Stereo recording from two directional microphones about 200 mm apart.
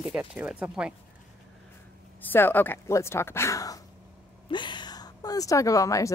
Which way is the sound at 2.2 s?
10° left (ahead or behind).